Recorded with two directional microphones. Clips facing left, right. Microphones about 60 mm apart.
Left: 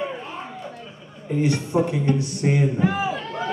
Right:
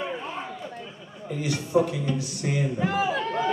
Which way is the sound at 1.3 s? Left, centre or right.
Left.